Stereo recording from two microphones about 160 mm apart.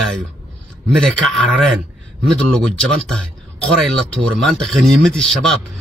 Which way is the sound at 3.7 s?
Centre (ahead or behind).